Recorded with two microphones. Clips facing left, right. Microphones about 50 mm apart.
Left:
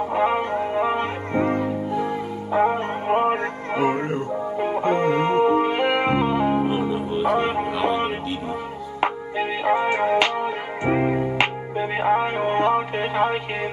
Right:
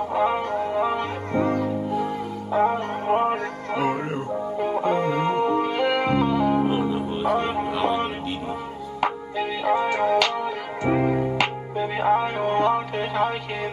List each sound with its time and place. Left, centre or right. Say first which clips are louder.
0.1 s music: left 1 dB; left
1.9 s music: left 1 dB; centre
2.5 s music: left 1 dB; left
3.8 s music: left 3 dB; centre
5.4 s music: left 3 dB; left
6.6 s music: even; centre
7.3 s music: left 2 dB; centre
7.7 s music: right 1 dB; centre
9.0 s music: left 2 dB; left